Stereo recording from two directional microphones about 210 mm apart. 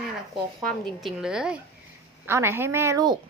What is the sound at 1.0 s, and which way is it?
A woman's voice, 5° right (ahead or behind).